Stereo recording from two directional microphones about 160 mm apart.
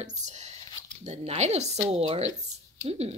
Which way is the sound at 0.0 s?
45° right (ahead or behind).